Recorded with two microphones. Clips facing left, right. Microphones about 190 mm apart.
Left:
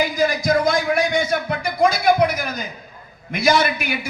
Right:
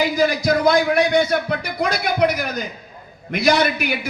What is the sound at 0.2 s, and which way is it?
A man's voice, 65° right (ahead or behind).